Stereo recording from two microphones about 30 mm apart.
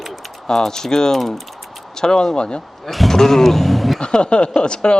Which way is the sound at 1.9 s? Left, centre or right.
Left.